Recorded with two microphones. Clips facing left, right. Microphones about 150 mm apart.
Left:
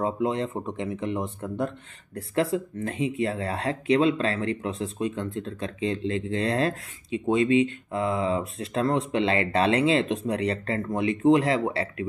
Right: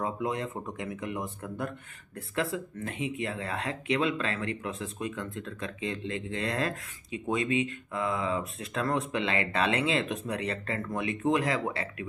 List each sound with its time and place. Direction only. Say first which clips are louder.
0.0 s speech: left 6 dB; 30° left (ahead or behind)